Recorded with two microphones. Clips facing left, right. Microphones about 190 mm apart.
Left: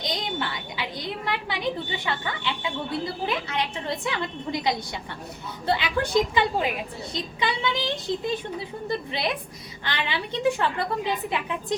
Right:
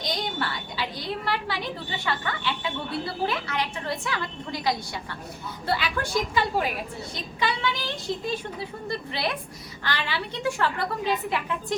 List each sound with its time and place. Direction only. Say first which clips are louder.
0.0 s a sound: even; 20° left (ahead or behind)
2.1 s a woman's voice: right 2 dB; 20° left (ahead or behind)
3.2 s a woman's voice: left 1 dB; 20° left (ahead or behind)